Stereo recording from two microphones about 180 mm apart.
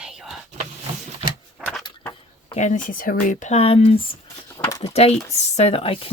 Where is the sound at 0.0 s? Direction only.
5° right (ahead or behind).